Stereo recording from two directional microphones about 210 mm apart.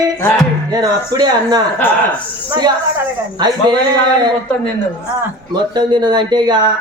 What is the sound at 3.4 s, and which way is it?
Speech, 20° right (ahead or behind).